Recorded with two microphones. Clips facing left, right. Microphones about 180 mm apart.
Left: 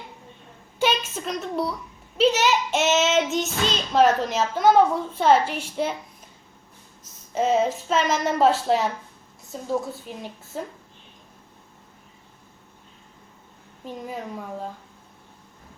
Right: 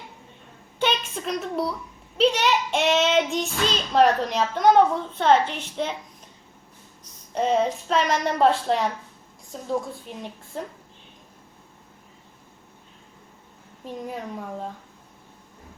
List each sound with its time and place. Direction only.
0.8 s a woman's voice: 5° left (ahead or behind)
2.1 s child singing: 5° left (ahead or behind)
7.3 s child singing: 5° left (ahead or behind)
13.8 s child singing: centre (ahead or behind)